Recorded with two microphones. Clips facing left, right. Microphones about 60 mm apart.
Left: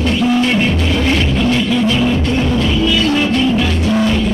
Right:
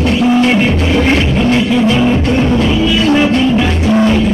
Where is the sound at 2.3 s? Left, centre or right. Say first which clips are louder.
Right 4 dB; centre.